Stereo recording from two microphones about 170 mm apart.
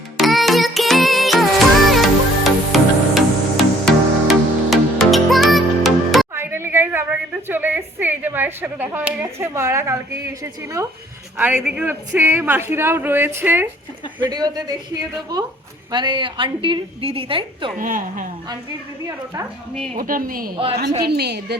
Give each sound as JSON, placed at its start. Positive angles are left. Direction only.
{"t": 0.2, "sound": "music", "side_deg": 0}
{"t": 6.3, "sound": "a sound", "side_deg": -15}
{"t": 11.3, "sound": "a woman's voice", "side_deg": -10}
{"t": 14.3, "sound": "a woman's voice", "side_deg": -25}
{"t": 15.9, "sound": "a woman's voice", "side_deg": -25}
{"t": 17.7, "sound": "a woman's voice", "side_deg": -55}
{"t": 19.0, "sound": "a woman's voice", "side_deg": -15}
{"t": 20.0, "sound": "a woman's voice", "side_deg": -55}
{"t": 21.1, "sound": "a woman's voice", "side_deg": -75}